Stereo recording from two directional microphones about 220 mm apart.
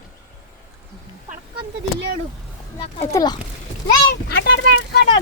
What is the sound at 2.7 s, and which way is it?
Speech, 25° left (ahead or behind).